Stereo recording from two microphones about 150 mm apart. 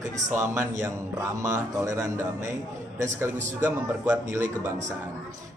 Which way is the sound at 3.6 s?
15° right (ahead or behind).